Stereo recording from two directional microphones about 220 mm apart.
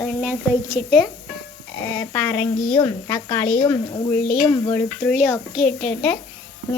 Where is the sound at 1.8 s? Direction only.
5° left (ahead or behind).